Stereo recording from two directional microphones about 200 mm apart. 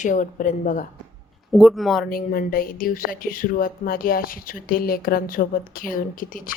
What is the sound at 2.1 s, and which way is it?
Speech, 45° left (ahead or behind).